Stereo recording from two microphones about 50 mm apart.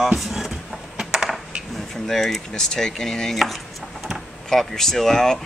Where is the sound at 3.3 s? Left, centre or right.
Centre.